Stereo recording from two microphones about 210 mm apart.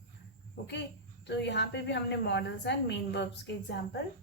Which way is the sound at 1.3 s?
55° left (ahead or behind).